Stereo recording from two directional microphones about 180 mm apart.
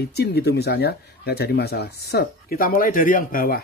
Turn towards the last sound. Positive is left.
turn(degrees=55)  # may be behind; listen again after turning